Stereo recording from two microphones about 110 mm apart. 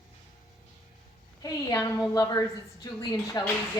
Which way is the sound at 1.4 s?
30° left (ahead or behind).